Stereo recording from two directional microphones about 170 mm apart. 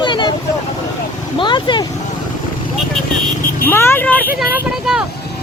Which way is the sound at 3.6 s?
15° left (ahead or behind).